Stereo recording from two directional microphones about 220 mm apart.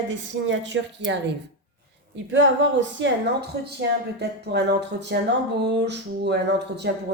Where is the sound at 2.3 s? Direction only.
55° right (ahead or behind).